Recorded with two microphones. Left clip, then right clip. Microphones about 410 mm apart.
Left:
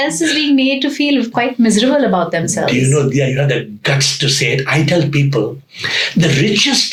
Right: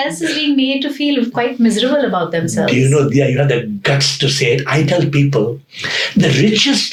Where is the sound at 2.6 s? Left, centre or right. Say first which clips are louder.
Right 2 dB; right.